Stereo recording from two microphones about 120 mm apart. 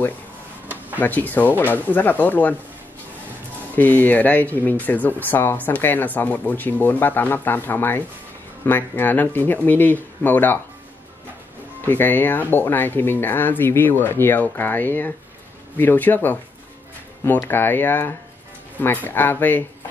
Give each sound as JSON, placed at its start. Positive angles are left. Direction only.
{"t": 0.9, "sound": "speech", "side_deg": 15}
{"t": 3.7, "sound": "speech", "side_deg": 15}
{"t": 11.8, "sound": "speech", "side_deg": 15}
{"t": 17.5, "sound": "speech", "side_deg": 15}